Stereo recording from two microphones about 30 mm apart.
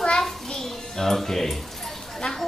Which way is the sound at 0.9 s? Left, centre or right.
Centre.